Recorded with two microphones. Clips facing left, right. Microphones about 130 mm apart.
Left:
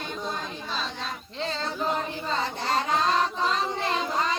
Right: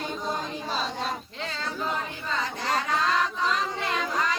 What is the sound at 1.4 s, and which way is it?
Child singing, 30° left (ahead or behind).